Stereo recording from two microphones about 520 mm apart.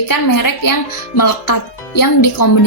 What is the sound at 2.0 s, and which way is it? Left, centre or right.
Speech, left.